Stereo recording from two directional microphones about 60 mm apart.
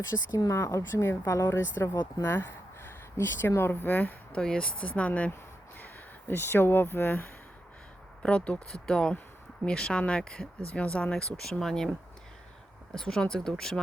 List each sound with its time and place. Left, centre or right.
0.3 s a woman's voice: left
2.2 s a sound: left
3.6 s speech: left
5.8 s speech: left
8.2 s speech: centre